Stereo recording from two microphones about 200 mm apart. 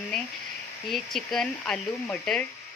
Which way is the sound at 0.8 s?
Centre (ahead or behind).